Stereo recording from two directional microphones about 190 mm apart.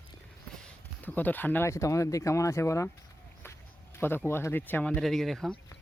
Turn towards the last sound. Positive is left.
turn(degrees=0)  # may be behind; listen again after turning